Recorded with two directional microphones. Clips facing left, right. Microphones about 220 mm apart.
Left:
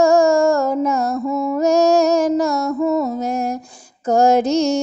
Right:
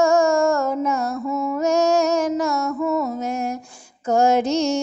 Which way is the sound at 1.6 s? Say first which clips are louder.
Left 4 dB; 35° left (ahead or behind).